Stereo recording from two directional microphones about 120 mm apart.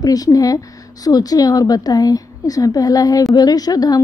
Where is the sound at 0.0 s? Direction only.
30° left (ahead or behind).